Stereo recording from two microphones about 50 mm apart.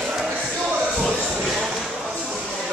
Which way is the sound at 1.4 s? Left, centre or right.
Centre.